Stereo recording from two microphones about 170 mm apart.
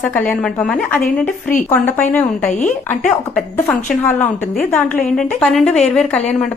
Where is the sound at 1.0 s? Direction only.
55° left (ahead or behind).